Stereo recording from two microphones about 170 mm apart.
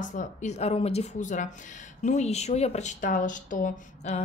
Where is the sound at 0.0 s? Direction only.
50° left (ahead or behind).